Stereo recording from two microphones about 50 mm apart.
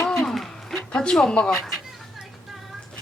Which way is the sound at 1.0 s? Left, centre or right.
Centre.